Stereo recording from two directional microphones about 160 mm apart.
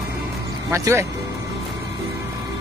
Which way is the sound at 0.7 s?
15° right (ahead or behind).